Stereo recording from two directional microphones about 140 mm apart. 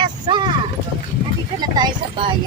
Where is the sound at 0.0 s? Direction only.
35° right (ahead or behind).